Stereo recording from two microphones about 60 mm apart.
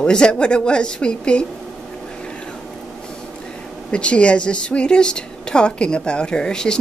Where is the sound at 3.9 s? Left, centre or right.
Centre.